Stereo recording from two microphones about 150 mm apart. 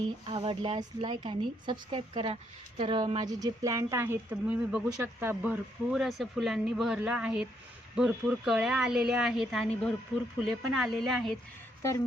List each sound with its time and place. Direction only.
0.3 s a woman's voice: 35° right (ahead or behind); by 11.3 s centre (ahead or behind)
11.8 s speech: 20° left (ahead or behind)